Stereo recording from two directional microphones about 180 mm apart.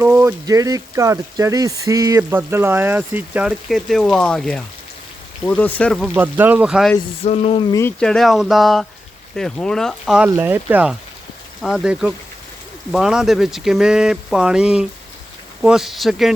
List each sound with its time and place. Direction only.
0.0 s speech: 15° right (ahead or behind); by 6.1 s 5° left (ahead or behind)
6.1 s speech: 10° right (ahead or behind)
7.2 s frying: 35° left (ahead or behind)
7.7 s speech: 15° left (ahead or behind)
7.9 s speech: 5° left (ahead or behind)
10.2 s speech: 15° right (ahead or behind)